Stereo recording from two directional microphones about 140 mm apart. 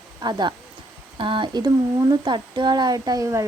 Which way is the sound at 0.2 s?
30° right (ahead or behind).